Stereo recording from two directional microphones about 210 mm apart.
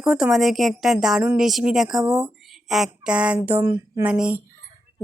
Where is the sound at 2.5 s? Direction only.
Centre (ahead or behind).